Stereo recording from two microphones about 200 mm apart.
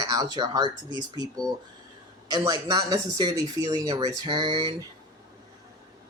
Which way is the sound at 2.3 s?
20° right (ahead or behind).